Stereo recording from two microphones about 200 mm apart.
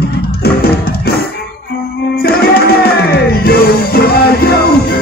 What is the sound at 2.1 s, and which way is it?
Music, 50° left (ahead or behind).